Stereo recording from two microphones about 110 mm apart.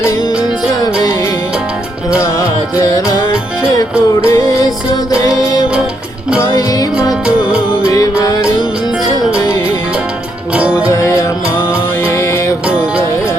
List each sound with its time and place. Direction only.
2.1 s music: 25° left (ahead or behind)
3.6 s music: 25° left (ahead or behind)
6.4 s music: 25° left (ahead or behind)
7.1 s music: 10° right (ahead or behind)
7.8 s music: 30° left (ahead or behind)
10.5 s music: 10° right (ahead or behind)
10.8 s music: 25° left (ahead or behind)
12.6 s music: 10° right (ahead or behind)